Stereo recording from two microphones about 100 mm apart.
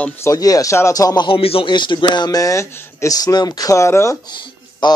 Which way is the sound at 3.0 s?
40° left (ahead or behind).